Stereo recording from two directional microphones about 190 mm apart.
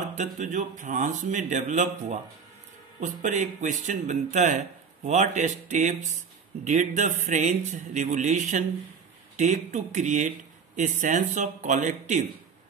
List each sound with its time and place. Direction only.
0.1 s speech: 40° right (ahead or behind)